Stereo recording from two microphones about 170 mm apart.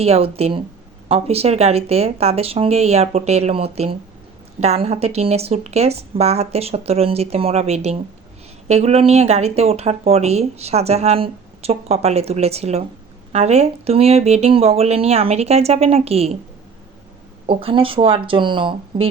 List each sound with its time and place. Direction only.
0.0 s speech: 35° right (ahead or behind)
17.4 s speech: 35° right (ahead or behind)